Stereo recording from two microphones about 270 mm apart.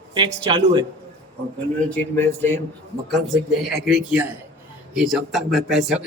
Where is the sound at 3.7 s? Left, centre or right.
Centre.